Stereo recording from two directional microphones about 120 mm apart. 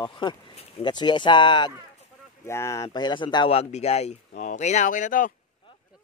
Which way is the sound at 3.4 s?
60° left (ahead or behind).